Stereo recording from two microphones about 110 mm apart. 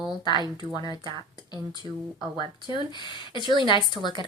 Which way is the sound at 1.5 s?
40° left (ahead or behind).